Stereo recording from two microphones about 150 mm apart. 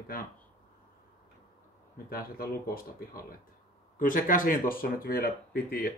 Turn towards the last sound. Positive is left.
turn(degrees=80)